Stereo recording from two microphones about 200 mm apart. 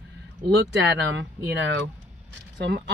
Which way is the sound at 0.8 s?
60° right (ahead or behind).